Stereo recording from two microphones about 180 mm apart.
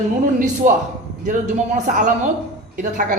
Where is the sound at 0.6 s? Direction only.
40° right (ahead or behind).